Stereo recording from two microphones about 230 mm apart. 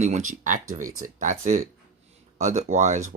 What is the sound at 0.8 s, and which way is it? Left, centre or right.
Speech, right.